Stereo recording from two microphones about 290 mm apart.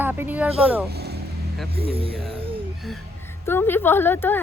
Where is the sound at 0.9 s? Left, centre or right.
Right.